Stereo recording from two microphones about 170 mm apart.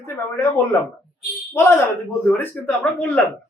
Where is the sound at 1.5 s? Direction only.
15° left (ahead or behind).